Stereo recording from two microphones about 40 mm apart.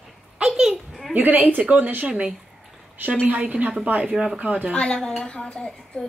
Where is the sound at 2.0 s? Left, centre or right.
Right.